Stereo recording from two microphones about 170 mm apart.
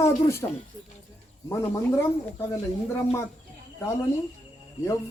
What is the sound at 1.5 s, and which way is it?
Speech, 15° left (ahead or behind).